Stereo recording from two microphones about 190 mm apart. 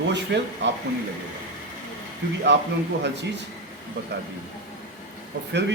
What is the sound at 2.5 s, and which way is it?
Speech, 70° right (ahead or behind).